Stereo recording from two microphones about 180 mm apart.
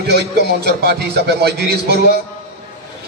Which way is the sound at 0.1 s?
65° right (ahead or behind).